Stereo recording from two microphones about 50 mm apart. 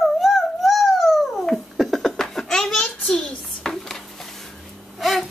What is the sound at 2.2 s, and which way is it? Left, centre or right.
Laughter, centre.